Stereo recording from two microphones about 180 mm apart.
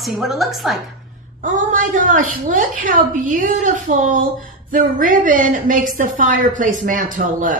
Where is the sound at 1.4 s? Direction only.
45° right (ahead or behind).